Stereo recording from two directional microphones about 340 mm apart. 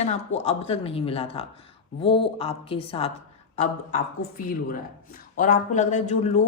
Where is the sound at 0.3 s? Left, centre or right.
Centre.